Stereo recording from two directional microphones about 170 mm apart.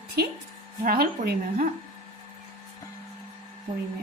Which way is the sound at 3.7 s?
25° right (ahead or behind).